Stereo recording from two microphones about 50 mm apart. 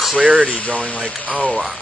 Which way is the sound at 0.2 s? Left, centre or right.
Right.